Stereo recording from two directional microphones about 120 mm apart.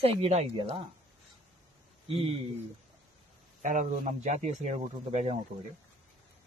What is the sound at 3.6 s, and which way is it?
Speech, 90° right.